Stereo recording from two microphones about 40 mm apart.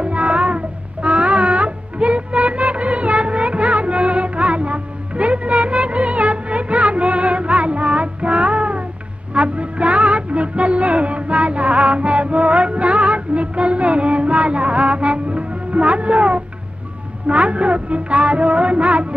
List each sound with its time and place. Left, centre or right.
0.0 s music: right